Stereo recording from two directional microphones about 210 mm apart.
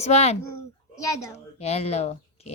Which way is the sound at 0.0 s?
30° left (ahead or behind).